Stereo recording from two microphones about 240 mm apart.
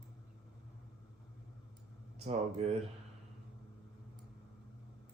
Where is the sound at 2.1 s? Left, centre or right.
Right.